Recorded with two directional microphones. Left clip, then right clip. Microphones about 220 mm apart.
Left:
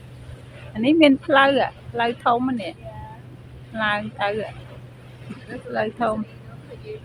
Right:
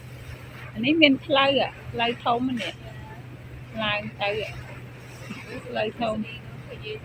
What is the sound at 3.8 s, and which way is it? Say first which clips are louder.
Speech: left 4 dB; 15° left (ahead or behind).